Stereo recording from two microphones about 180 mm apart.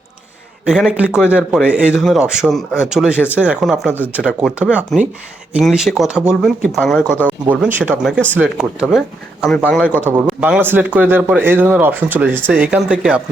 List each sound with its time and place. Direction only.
0.6 s speech: 5° right (ahead or behind)